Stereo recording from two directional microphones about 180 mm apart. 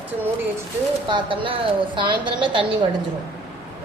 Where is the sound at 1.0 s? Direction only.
25° right (ahead or behind).